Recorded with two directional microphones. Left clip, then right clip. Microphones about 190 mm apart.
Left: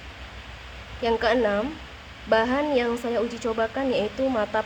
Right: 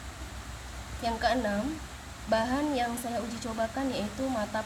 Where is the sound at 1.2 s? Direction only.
65° left (ahead or behind).